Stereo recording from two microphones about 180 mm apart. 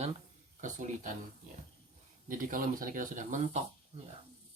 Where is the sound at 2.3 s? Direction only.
50° right (ahead or behind).